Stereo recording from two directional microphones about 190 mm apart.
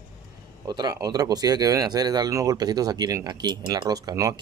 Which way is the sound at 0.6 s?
20° right (ahead or behind).